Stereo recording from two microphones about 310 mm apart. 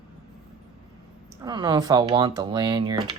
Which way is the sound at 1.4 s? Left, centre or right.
Centre.